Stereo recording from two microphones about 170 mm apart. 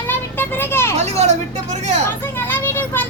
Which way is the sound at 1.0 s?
40° right (ahead or behind).